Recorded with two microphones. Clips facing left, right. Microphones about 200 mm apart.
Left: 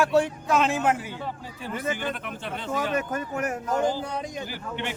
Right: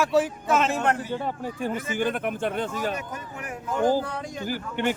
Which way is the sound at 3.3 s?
45° left (ahead or behind).